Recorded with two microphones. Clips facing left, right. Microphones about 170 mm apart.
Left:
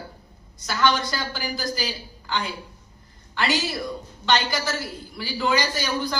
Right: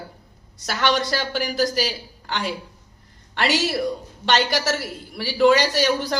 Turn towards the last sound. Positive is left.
turn(degrees=-75)  # may be behind; listen again after turning